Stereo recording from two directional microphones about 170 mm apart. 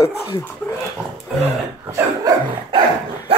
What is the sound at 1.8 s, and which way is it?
Dog, 15° right (ahead or behind).